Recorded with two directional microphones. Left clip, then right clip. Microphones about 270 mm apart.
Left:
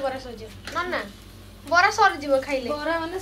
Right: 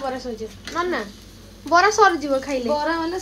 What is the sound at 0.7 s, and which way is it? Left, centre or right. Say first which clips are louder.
A woman's voice: right 3 dB; centre.